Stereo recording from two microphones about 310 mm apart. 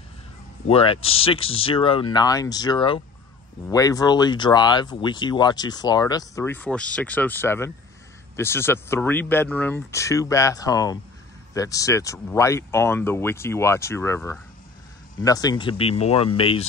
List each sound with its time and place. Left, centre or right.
0.7 s speech: centre